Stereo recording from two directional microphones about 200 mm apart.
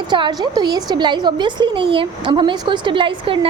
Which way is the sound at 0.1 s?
20° right (ahead or behind).